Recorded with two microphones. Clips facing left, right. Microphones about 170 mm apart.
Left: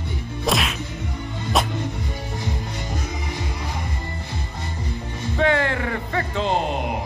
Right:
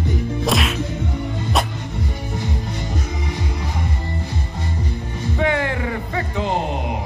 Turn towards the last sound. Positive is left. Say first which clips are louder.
# even
turn(degrees=-15)  # may be behind; listen again after turning